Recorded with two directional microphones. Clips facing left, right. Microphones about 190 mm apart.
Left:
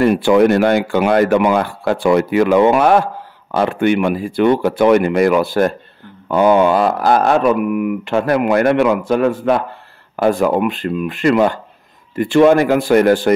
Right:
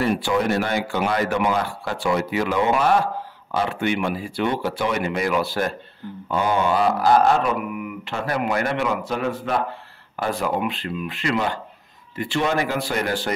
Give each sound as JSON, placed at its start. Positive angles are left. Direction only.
{"t": 0.0, "sound": "speech", "side_deg": 60}